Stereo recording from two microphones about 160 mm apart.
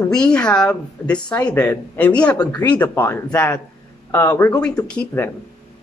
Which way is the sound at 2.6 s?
10° left (ahead or behind).